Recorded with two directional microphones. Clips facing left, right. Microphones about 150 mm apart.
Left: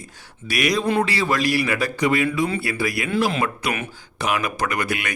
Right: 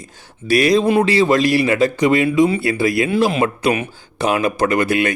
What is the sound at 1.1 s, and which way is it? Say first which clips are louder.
A man's voice: right 7 dB; 20° right (ahead or behind).